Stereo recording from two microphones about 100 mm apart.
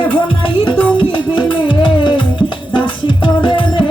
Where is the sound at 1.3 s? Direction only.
55° left (ahead or behind).